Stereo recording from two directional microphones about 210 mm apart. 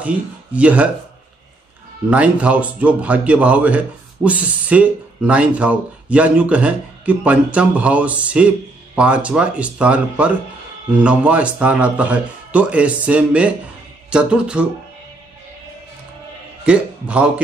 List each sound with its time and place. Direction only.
0.0 s speech: 5° right (ahead or behind)
2.0 s speech: 5° right (ahead or behind)
16.6 s a man's voice: 5° right (ahead or behind)